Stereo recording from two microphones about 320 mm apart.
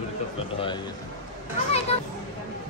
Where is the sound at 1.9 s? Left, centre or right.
Centre.